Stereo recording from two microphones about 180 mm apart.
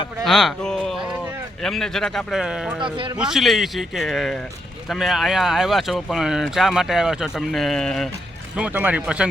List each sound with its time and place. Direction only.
0.3 s a sound: centre (ahead or behind)
1.6 s speech: centre (ahead or behind)
2.8 s a man's voice: 30° right (ahead or behind)
3.2 s speech: 5° right (ahead or behind)
8.5 s speech: 10° right (ahead or behind)